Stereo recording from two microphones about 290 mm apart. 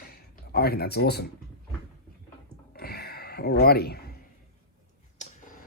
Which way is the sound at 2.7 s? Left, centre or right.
Left.